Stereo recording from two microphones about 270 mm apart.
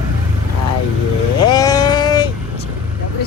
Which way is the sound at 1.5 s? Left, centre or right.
Centre.